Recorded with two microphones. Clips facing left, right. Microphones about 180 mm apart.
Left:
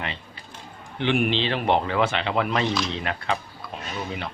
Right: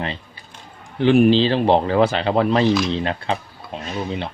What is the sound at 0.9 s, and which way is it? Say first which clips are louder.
Speech: right 9 dB; 40° right (ahead or behind).